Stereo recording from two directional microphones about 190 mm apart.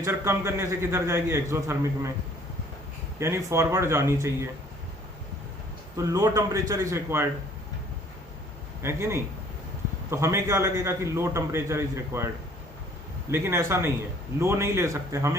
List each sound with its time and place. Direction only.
0.0 s a man's voice: 15° right (ahead or behind)
3.2 s a man's voice: 15° right (ahead or behind)
6.0 s a man's voice: 15° right (ahead or behind)
8.8 s a man's voice: 15° right (ahead or behind)
13.3 s a man's voice: 15° right (ahead or behind)